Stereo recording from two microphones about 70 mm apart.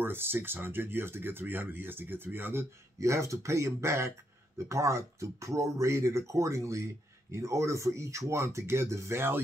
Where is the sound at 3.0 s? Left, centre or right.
Right.